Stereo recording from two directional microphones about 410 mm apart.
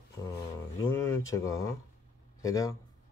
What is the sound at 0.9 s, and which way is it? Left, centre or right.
Speech, centre.